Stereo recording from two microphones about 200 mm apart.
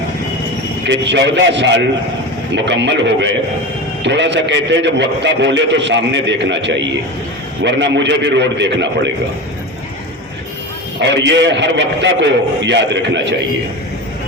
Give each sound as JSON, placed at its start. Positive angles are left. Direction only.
{"t": 0.9, "sound": "a man's voice", "side_deg": -60}
{"t": 11.0, "sound": "a man's voice", "side_deg": -60}